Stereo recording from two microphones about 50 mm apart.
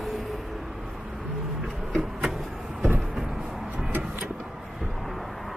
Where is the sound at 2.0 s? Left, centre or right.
Centre.